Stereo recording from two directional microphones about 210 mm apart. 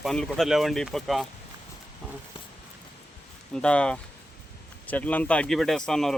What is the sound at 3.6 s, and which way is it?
Speech, 5° left (ahead or behind).